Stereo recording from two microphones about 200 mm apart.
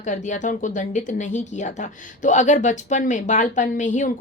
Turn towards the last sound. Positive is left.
turn(degrees=35)  # may be behind; listen again after turning